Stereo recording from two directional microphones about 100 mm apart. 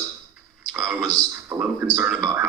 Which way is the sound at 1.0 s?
35° right (ahead or behind).